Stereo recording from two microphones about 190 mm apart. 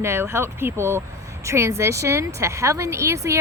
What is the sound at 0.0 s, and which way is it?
Speech, 15° right (ahead or behind).